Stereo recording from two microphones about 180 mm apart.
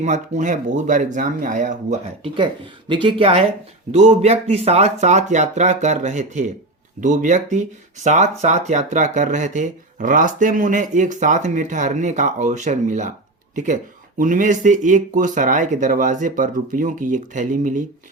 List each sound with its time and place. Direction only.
0.0 s speech: 40° right (ahead or behind)
2.2 s speech: 30° right (ahead or behind)
14.2 s speech: 45° right (ahead or behind)